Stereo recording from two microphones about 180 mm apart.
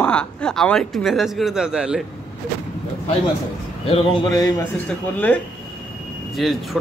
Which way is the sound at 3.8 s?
30° left (ahead or behind).